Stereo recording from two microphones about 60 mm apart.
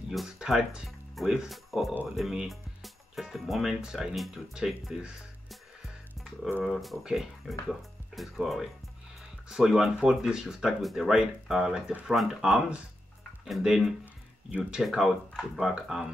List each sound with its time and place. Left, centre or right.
0.4 s speech: centre
0.8 s speech: centre
6.6 s speech: centre